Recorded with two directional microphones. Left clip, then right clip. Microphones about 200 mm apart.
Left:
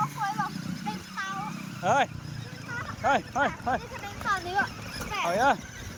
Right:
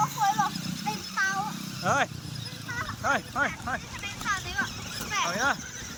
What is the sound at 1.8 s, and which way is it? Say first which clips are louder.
Speech: left 2 dB; 15° left (ahead or behind).